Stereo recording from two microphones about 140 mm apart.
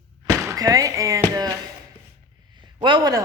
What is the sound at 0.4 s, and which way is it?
Speech, 25° right (ahead or behind).